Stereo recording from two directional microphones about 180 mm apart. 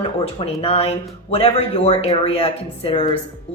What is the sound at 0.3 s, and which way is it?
Speech, 35° left (ahead or behind).